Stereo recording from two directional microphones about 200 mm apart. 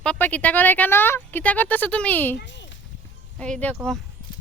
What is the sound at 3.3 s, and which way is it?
Speech, 5° left (ahead or behind).